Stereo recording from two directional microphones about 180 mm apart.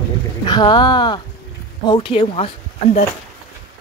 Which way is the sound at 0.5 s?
25° left (ahead or behind).